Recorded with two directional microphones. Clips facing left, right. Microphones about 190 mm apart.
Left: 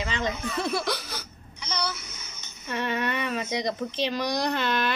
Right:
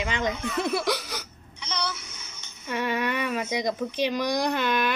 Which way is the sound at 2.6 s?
10° right (ahead or behind).